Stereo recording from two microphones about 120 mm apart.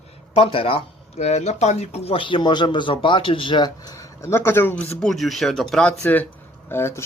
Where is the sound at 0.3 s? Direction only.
50° left (ahead or behind); by 4.9 s 15° left (ahead or behind).